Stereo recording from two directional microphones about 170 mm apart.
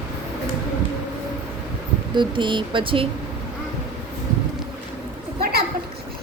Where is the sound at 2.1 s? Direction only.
30° right (ahead or behind).